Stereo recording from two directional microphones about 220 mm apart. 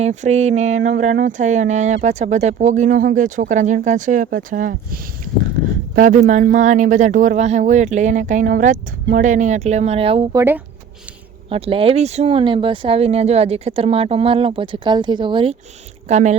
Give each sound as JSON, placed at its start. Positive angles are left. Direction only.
{"t": 0.0, "sound": "speech", "side_deg": -30}
{"t": 10.3, "sound": "speech", "side_deg": -10}
{"t": 11.4, "sound": "speech", "side_deg": -25}